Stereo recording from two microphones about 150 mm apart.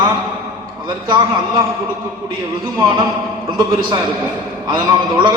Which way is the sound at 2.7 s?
25° right (ahead or behind).